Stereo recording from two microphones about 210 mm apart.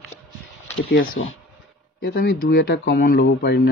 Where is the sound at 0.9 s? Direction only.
70° left (ahead or behind).